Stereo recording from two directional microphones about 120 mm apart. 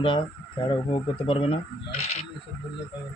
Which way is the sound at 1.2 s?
50° left (ahead or behind).